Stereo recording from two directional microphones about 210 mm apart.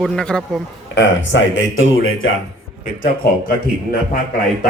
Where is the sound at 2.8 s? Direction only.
45° left (ahead or behind).